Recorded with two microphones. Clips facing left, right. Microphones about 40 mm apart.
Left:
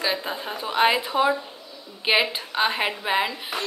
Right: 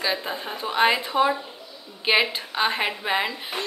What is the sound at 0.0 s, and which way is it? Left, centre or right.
A woman's voice, centre.